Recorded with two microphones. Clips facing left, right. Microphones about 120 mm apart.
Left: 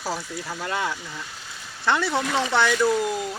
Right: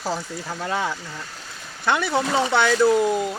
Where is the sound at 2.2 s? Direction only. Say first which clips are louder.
Right 2 dB; 30° right (ahead or behind).